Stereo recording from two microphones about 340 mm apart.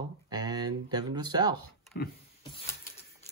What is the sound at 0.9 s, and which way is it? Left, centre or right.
Speech, centre.